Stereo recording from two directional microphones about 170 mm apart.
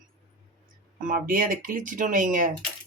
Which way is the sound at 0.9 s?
50° right (ahead or behind).